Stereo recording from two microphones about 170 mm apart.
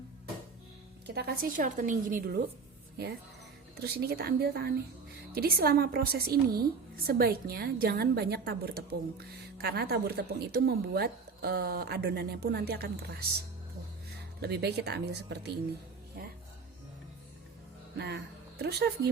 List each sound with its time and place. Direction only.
1.0 s a woman's voice: 75° right (ahead or behind); by 2.4 s 55° right (ahead or behind)
3.8 s a woman's voice: 70° right (ahead or behind)
14.4 s a woman's voice: 75° right (ahead or behind)
17.9 s speech: 85° right
18.6 s a woman's voice: 75° right (ahead or behind)